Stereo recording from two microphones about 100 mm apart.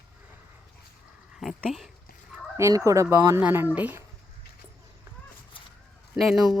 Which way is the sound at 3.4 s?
20° right (ahead or behind).